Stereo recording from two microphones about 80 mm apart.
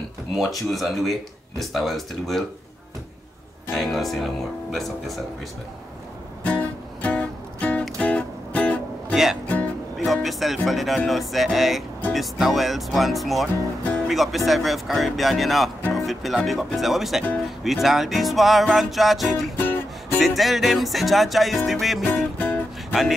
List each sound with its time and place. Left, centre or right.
0.4 s speech: centre
3.7 s speech: centre
6.4 s music: centre
9.1 s speech: centre
9.9 s music: centre
11.1 s speech: centre
19.5 s music: left
20.2 s speech: centre
22.4 s music: left